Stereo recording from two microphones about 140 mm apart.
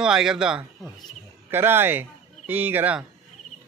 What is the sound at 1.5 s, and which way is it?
Speech, 15° right (ahead or behind).